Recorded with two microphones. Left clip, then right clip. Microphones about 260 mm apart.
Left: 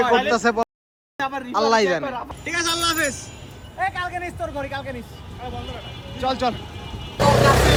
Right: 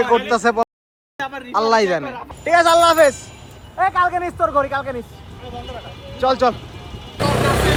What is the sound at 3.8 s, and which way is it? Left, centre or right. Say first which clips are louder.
A man's voice: right 8 dB; centre.